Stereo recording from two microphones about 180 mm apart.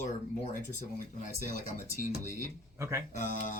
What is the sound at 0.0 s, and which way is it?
Speech, 45° left (ahead or behind).